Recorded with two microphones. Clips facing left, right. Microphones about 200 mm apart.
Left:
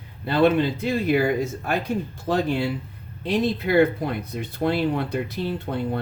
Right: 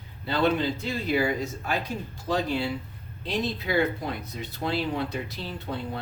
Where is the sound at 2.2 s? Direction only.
55° left (ahead or behind).